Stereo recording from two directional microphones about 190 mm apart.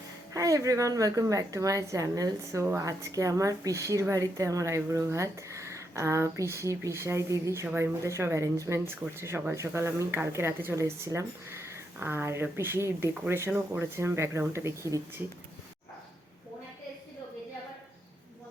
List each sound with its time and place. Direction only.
0.3 s a woman's voice: 15° right (ahead or behind)